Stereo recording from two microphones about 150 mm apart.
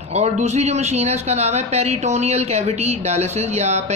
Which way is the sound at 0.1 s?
50° right (ahead or behind).